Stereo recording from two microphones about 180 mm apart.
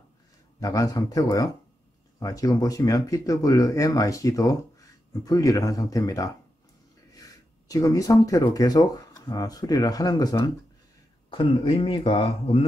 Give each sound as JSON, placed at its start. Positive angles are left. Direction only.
{"t": 0.6, "sound": "speech", "side_deg": 20}